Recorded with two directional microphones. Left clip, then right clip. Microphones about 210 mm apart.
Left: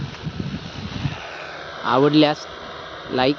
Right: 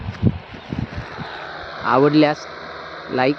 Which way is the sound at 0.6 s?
55° left (ahead or behind).